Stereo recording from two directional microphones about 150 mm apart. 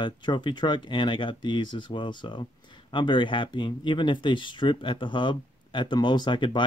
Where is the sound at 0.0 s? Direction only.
30° left (ahead or behind).